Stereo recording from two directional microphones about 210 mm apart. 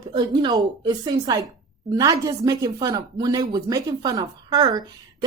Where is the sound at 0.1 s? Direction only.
20° right (ahead or behind).